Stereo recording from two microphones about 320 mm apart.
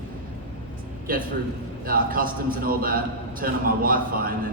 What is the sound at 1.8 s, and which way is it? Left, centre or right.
A man's voice, right.